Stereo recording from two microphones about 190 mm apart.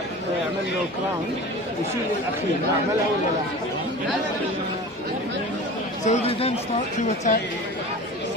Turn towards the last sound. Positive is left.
turn(degrees=40)  # may be behind; listen again after turning